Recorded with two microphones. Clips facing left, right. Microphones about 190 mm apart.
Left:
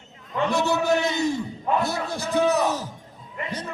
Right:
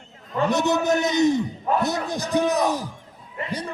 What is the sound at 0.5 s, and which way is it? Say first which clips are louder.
A man's voice: right 1 dB; 20° right (ahead or behind).